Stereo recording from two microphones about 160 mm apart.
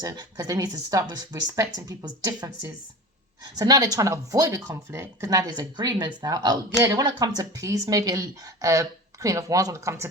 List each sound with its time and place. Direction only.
0.0 s speech: 25° right (ahead or behind)